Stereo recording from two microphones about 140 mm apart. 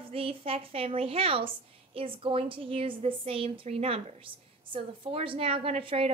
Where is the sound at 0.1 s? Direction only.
45° right (ahead or behind).